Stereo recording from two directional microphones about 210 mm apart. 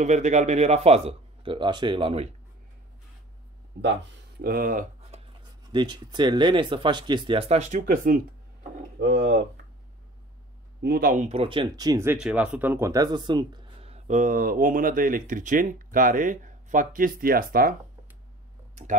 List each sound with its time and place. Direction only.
0.0 s speech: 35° right (ahead or behind)
4.4 s speech: 45° right (ahead or behind)
5.7 s speech: 20° right (ahead or behind); by 8.2 s 40° right (ahead or behind)
9.0 s speech: 55° right (ahead or behind)
10.8 s speech: 45° right (ahead or behind)